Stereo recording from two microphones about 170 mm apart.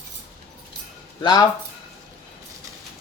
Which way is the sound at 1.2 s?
25° left (ahead or behind).